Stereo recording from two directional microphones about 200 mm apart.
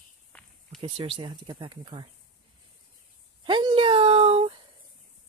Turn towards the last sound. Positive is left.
turn(degrees=-30)  # may be behind; listen again after turning